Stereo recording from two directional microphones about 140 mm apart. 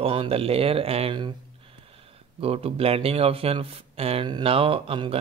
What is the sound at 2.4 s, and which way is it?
Speech, 45° right (ahead or behind).